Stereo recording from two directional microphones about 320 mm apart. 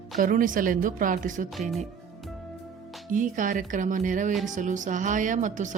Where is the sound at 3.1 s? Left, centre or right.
Right.